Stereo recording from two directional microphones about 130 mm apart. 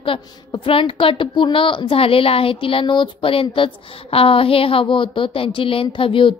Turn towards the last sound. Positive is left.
turn(degrees=40)  # may be behind; listen again after turning